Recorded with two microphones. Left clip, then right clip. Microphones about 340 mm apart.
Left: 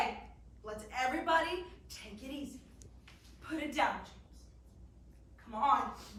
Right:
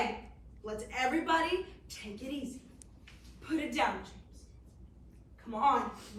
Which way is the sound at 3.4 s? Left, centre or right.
Centre.